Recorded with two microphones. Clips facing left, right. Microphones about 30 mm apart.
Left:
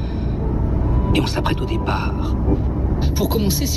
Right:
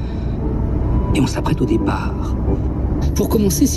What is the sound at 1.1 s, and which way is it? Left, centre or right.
Speech, left.